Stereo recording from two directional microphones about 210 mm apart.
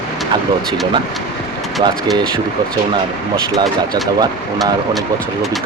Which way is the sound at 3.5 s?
20° right (ahead or behind).